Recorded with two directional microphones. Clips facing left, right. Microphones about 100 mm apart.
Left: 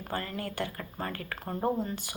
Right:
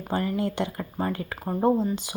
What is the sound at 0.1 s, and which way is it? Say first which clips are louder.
Speech: right 9 dB; 20° right (ahead or behind).